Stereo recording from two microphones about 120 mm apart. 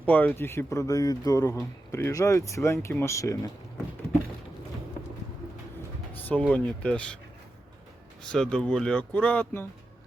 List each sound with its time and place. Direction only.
0.0 s speech: 15° left (ahead or behind)
6.2 s speech: 10° left (ahead or behind)
8.2 s speech: 5° left (ahead or behind)